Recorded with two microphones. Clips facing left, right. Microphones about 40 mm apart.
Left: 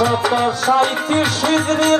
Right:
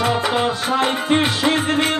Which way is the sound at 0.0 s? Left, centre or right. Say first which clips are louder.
Left 3 dB; right.